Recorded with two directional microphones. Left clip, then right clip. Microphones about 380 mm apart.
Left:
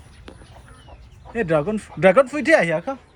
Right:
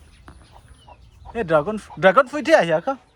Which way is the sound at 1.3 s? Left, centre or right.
Centre.